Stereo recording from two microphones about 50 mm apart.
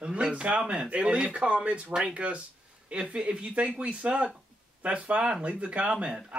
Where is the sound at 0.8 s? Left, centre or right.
Right.